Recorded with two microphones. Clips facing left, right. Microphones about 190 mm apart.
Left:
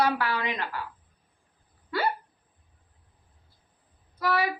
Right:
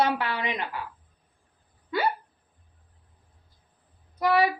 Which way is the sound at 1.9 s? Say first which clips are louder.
Right 2 dB; 20° right (ahead or behind).